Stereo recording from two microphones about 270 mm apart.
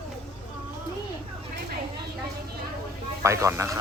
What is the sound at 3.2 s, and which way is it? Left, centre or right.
Speech, centre.